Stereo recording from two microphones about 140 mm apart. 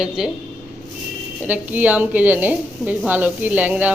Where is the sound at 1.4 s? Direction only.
10° right (ahead or behind).